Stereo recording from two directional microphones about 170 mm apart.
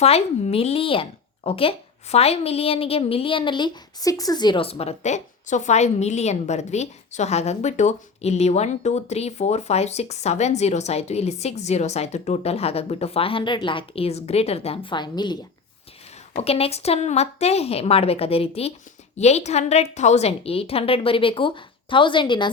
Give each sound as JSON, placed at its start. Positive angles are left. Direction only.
{"t": 0.0, "sound": "a woman's voice", "side_deg": 40}
{"t": 16.3, "sound": "a woman's voice", "side_deg": 35}